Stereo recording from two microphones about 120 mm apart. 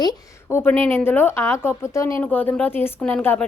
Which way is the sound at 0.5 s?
20° left (ahead or behind).